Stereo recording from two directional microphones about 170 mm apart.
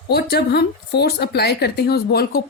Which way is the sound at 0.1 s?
70° left (ahead or behind).